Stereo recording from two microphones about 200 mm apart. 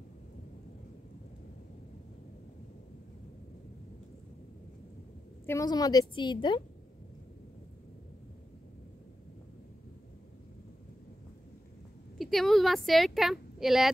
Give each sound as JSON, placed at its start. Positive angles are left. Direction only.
{"t": 5.5, "sound": "a woman's voice", "side_deg": 15}
{"t": 12.2, "sound": "speech", "side_deg": 0}